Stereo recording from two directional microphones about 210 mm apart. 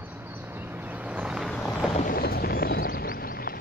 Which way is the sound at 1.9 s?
40° left (ahead or behind).